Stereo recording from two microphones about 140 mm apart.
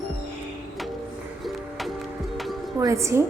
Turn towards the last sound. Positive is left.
turn(degrees=-20)  # may be behind; listen again after turning